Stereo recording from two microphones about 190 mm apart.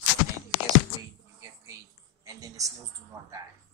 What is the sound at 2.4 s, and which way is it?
Speech, 15° right (ahead or behind).